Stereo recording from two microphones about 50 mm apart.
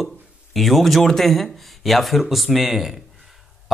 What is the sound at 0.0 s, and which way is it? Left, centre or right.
Speech, centre.